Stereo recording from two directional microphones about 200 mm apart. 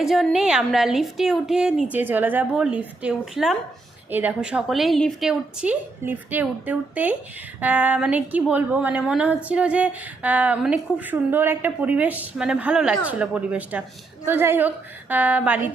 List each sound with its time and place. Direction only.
0.0 s a woman's voice: centre (ahead or behind)